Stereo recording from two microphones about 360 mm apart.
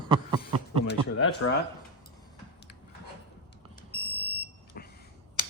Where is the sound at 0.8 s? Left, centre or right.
Left.